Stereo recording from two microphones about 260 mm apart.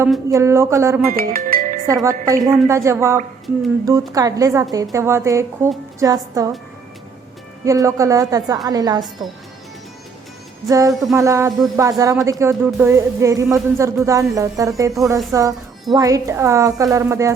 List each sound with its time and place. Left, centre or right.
0.0 s speech: centre
1.1 s music: right
2.0 s speech: centre
7.6 s speech: centre
10.7 s speech: centre